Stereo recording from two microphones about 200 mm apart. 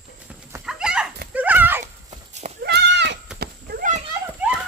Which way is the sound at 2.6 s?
60° right (ahead or behind).